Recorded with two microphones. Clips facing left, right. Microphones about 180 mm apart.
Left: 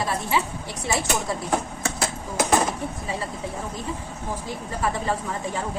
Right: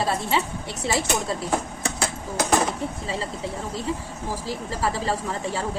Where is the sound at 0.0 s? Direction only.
30° right (ahead or behind).